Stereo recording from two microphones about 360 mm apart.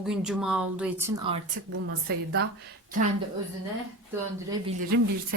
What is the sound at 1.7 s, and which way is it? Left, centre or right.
Speech, right.